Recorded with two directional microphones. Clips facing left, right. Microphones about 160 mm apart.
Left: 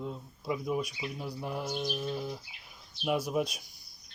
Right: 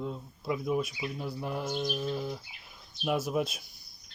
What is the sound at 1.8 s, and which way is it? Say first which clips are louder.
Speech: right 2 dB; 5° right (ahead or behind).